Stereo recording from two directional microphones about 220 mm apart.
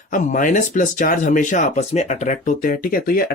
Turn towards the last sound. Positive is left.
turn(degrees=40)  # may be behind; listen again after turning